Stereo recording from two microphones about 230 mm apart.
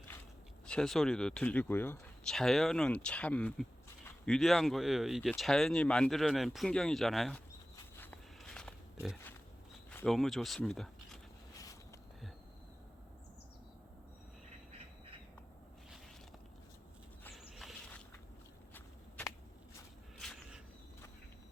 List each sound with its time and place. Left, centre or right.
0.7 s speech: centre
7.9 s pig: centre
9.9 s speech: centre
11.5 s a sound: centre
17.2 s walk: centre
20.1 s a sound: centre